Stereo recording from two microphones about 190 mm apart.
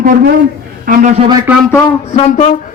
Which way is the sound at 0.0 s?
45° right (ahead or behind).